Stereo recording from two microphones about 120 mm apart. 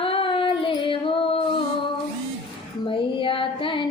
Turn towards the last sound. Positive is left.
turn(degrees=45)  # may be behind; listen again after turning